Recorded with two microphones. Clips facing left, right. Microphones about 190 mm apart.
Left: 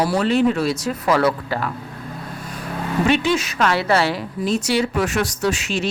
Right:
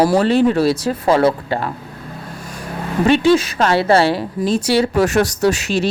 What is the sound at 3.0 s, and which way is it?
Speech, 30° right (ahead or behind).